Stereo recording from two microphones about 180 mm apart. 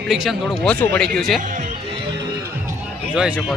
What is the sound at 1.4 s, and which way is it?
Music, 45° right (ahead or behind).